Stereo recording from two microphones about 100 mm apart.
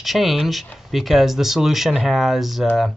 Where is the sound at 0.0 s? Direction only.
Centre (ahead or behind).